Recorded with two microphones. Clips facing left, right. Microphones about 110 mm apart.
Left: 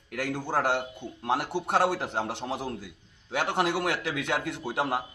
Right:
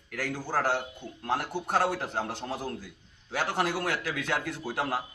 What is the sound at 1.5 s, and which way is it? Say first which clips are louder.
Speech: left 2 dB; 20° left (ahead or behind).